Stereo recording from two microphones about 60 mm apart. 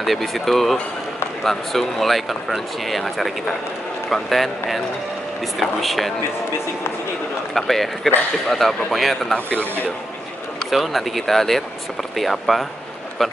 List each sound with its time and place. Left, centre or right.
0.0 s speech: centre
7.5 s speech: centre
9.3 s speech: left
10.7 s speech: centre